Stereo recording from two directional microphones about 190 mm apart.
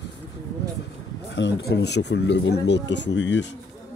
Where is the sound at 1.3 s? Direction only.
65° left (ahead or behind).